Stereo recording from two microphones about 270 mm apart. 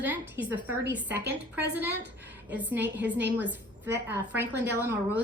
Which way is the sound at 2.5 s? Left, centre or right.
Centre.